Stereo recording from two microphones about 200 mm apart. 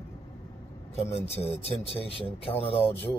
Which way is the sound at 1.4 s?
30° left (ahead or behind).